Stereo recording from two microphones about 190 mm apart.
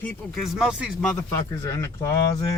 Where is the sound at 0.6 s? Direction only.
5° right (ahead or behind).